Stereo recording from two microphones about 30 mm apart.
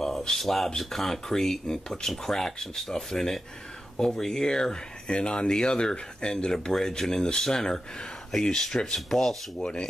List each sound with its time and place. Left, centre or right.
0.3 s speech: centre
5.1 s speech: left; by 9.4 s centre